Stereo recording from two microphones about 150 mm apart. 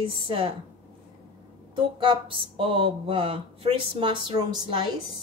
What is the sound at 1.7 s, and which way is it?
Speech, 35° right (ahead or behind).